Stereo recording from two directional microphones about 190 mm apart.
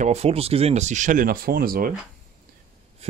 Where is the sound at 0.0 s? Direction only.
35° right (ahead or behind); by 2.0 s 50° right (ahead or behind).